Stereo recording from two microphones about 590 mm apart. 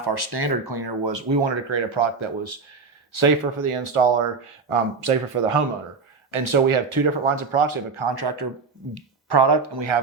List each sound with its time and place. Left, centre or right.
0.0 s speech: right
8.1 s speech: right